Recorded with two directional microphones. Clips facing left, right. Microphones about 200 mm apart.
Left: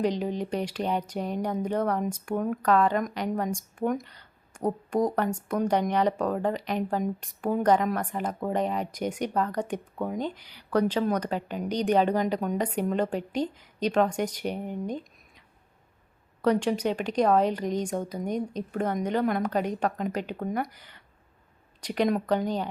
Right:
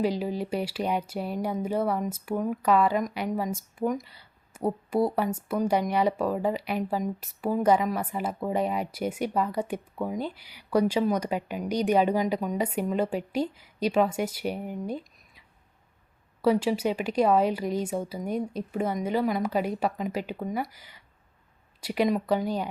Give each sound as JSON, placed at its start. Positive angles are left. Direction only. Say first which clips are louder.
{"t": 0.0, "sound": "speech", "louder": "even", "side_deg": -5}